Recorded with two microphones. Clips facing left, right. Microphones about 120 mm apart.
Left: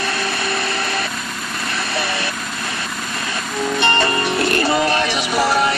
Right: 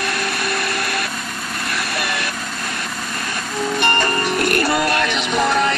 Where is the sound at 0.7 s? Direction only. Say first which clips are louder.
Left 1 dB; 25° left (ahead or behind).